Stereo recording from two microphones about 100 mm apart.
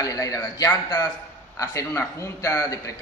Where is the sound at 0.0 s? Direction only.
35° left (ahead or behind).